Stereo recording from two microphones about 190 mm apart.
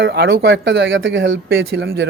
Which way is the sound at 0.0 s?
55° right (ahead or behind).